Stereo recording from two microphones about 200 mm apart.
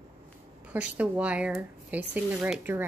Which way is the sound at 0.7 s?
5° right (ahead or behind).